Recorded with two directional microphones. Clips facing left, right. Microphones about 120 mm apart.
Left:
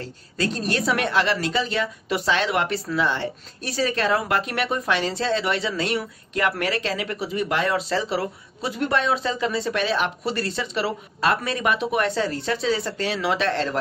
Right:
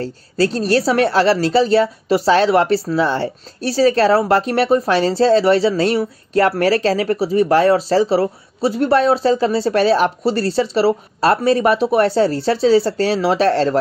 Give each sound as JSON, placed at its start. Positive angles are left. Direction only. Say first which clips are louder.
{"t": 0.0, "sound": "a woman's voice", "louder": "right 9 dB", "side_deg": -35}